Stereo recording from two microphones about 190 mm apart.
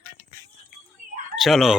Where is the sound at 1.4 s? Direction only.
Centre (ahead or behind).